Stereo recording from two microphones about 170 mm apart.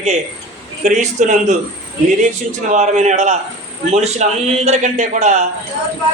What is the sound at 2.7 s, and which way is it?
A man's voice, 45° right (ahead or behind).